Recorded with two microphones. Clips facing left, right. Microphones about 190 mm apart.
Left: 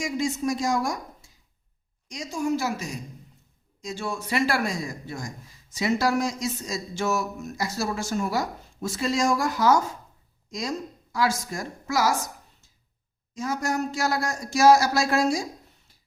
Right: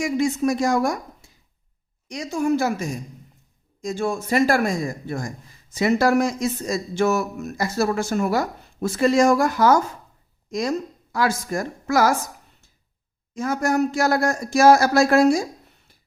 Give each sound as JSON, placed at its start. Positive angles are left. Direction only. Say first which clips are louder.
{"t": 0.0, "sound": "a woman's voice", "louder": "right 6 dB", "side_deg": -60}